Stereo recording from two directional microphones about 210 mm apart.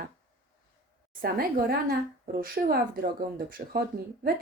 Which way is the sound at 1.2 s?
45° right (ahead or behind).